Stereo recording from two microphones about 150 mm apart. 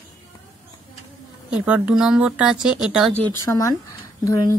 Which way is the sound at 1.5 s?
10° right (ahead or behind).